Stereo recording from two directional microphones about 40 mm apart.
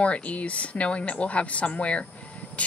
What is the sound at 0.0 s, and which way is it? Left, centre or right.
A woman's voice, left.